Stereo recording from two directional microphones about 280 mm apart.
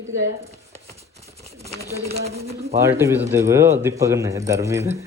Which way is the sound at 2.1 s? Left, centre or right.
Right.